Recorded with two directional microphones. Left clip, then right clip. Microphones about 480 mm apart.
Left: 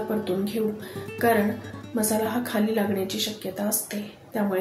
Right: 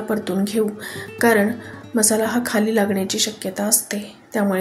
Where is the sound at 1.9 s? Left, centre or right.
Centre.